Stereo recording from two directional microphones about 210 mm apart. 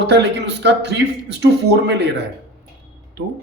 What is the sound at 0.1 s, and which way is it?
Speech, 55° right (ahead or behind).